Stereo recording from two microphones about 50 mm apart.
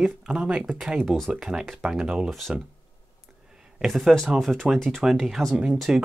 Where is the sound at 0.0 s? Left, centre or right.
Centre.